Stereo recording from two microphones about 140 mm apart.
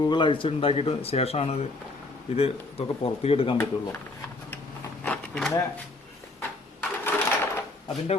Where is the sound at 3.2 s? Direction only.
45° left (ahead or behind).